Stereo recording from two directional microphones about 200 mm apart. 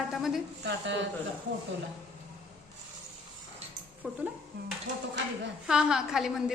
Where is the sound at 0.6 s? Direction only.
65° right (ahead or behind).